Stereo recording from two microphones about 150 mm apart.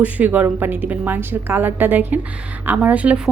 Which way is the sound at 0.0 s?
10° right (ahead or behind).